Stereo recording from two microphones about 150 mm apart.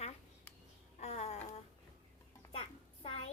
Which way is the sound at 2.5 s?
40° left (ahead or behind).